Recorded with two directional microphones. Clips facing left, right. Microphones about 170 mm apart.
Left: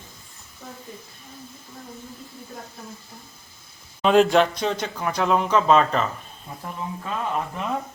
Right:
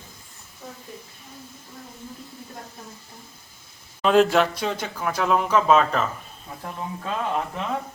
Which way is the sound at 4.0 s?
Centre (ahead or behind).